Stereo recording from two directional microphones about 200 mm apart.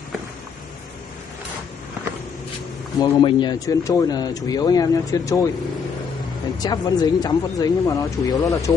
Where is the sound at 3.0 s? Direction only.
25° left (ahead or behind).